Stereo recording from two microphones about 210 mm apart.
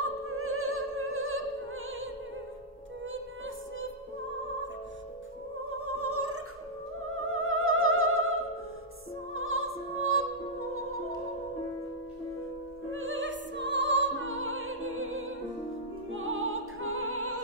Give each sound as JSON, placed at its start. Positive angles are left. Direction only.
{"t": 0.0, "sound": "music", "side_deg": -90}
{"t": 3.1, "sound": "music", "side_deg": -70}
{"t": 5.7, "sound": "music", "side_deg": -90}
{"t": 7.2, "sound": "music", "side_deg": -80}
{"t": 12.9, "sound": "music", "side_deg": -65}